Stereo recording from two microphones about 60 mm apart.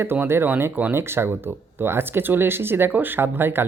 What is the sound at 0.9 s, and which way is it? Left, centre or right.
Speech, right.